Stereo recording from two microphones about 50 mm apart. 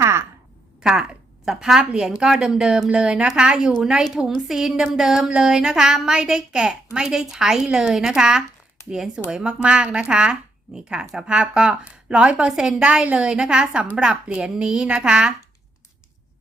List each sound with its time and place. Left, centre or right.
0.0 s a sound: right
0.8 s a woman's voice: centre
1.8 s a woman's voice: centre